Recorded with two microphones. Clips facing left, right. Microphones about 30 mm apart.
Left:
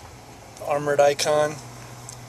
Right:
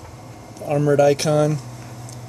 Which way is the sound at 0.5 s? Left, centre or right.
Centre.